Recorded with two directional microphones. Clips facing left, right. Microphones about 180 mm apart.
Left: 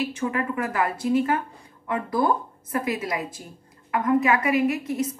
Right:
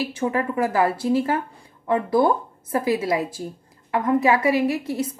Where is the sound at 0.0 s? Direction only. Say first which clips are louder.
Right 3 dB; 30° right (ahead or behind).